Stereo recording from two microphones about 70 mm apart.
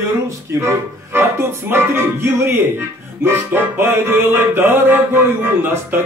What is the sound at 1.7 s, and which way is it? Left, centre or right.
Music, right.